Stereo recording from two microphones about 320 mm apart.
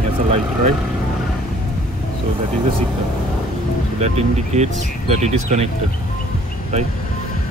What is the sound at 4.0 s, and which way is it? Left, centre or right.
Speech, right.